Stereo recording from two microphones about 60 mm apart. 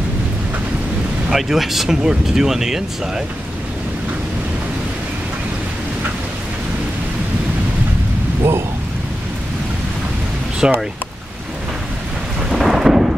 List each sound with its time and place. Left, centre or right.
1.3 s speech: centre
8.4 s a sound: right
10.6 s speech: centre
12.4 s thunder: centre